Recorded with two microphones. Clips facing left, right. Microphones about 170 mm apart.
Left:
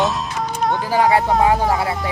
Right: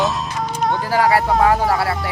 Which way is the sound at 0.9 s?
20° left (ahead or behind).